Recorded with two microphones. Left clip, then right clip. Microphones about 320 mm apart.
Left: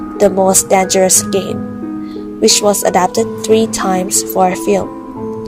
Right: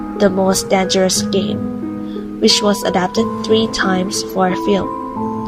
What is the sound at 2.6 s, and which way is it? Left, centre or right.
Speech, left.